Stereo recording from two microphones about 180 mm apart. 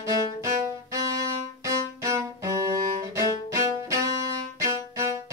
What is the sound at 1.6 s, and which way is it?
Music, 15° right (ahead or behind).